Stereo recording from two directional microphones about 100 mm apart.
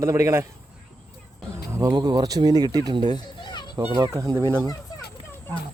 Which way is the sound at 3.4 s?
50° left (ahead or behind).